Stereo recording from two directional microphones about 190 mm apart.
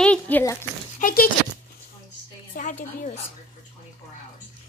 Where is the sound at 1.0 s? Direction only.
45° left (ahead or behind).